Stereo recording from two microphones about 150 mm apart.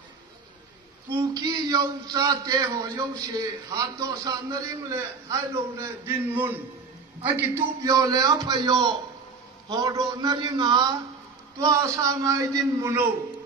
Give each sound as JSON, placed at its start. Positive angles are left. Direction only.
{"t": 1.1, "sound": "a man's voice", "side_deg": -25}